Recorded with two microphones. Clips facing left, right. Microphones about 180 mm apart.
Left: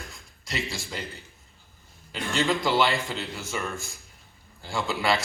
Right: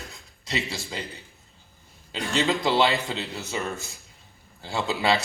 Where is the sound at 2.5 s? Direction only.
20° right (ahead or behind).